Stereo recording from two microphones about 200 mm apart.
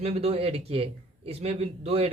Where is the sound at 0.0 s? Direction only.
30° right (ahead or behind).